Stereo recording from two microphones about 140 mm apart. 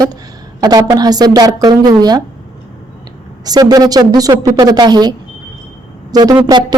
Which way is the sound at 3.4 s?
30° right (ahead or behind).